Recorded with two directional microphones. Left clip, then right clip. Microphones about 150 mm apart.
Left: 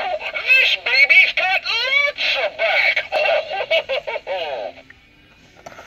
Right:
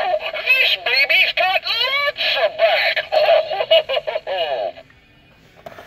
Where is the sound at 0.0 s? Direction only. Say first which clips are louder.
Right 3 dB; 20° left (ahead or behind).